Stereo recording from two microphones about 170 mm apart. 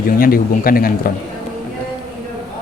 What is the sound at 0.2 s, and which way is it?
Speech, 60° left (ahead or behind).